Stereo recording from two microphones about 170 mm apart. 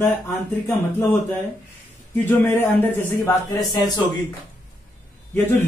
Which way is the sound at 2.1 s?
10° left (ahead or behind).